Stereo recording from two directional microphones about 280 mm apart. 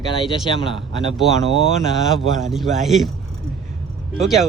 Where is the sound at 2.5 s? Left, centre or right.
Centre.